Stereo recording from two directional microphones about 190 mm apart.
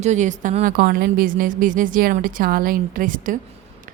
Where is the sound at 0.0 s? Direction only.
40° right (ahead or behind).